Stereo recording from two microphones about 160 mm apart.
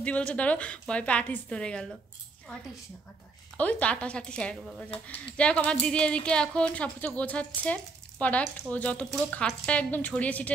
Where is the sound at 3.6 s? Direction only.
10° left (ahead or behind).